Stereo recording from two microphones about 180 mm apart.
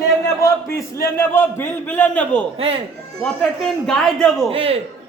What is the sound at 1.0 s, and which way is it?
A man's voice, 15° left (ahead or behind).